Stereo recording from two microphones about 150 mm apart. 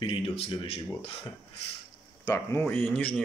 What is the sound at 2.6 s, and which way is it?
Speech, 10° left (ahead or behind).